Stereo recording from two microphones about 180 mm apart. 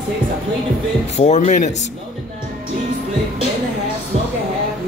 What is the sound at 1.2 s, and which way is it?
Speech, 40° left (ahead or behind).